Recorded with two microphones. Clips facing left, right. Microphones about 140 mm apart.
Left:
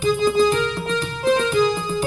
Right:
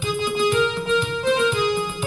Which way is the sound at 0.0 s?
40° left (ahead or behind).